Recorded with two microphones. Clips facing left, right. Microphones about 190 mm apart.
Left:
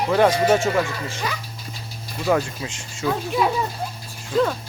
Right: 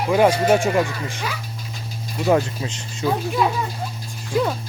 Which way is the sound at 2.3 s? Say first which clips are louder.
Right 2 dB; 25° right (ahead or behind).